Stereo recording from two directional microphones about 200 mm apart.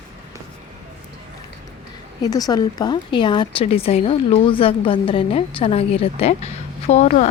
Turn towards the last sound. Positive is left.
turn(degrees=35)  # may be behind; listen again after turning